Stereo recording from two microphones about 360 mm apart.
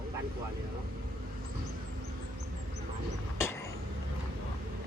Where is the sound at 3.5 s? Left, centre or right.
Centre.